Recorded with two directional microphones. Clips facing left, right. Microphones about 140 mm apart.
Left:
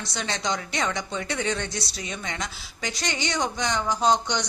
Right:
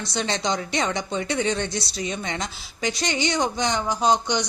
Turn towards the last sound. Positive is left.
turn(degrees=-5)  # may be behind; listen again after turning